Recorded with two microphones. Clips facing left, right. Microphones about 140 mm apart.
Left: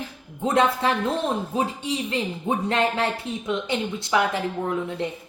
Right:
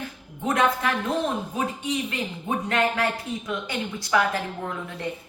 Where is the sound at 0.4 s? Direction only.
30° left (ahead or behind).